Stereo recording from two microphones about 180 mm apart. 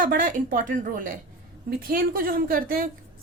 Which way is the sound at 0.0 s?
50° right (ahead or behind).